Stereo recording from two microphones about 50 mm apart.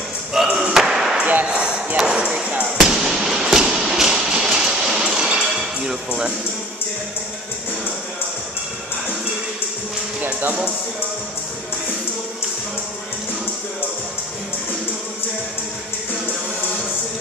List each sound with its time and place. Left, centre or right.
0.3 s slam: centre
1.4 s ping: right
2.0 s speech: centre
2.8 s fireworks: centre
3.2 s a sound: centre
5.9 s speech: centre